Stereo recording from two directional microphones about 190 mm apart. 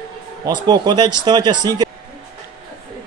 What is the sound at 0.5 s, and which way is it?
Speech, 20° right (ahead or behind).